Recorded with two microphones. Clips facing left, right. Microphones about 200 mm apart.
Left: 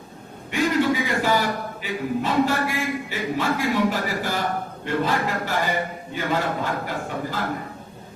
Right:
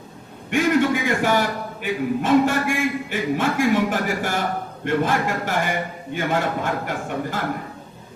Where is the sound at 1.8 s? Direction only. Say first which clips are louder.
Right 4 dB; 50° right (ahead or behind).